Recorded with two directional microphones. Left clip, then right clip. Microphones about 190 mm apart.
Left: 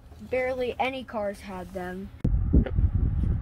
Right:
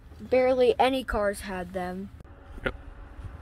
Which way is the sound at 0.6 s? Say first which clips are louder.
Right 6 dB; 80° right.